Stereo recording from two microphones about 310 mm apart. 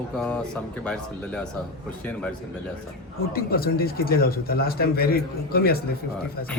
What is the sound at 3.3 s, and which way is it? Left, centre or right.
Speech, left.